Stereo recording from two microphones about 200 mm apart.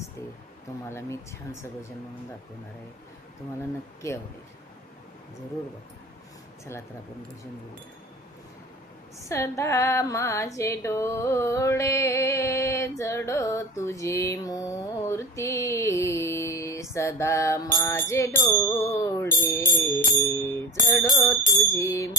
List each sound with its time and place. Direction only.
0.9 s female singing: 15° left (ahead or behind)
9.3 s female singing: 15° left (ahead or behind)